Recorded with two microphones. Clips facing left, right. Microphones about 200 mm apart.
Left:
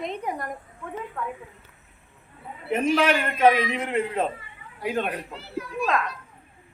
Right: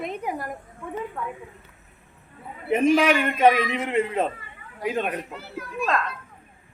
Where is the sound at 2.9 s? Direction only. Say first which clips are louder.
Right 2 dB; 10° right (ahead or behind).